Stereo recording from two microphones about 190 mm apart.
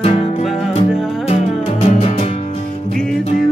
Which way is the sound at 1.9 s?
35° left (ahead or behind).